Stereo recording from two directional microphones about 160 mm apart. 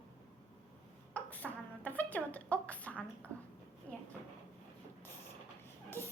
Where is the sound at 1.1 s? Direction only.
10° left (ahead or behind).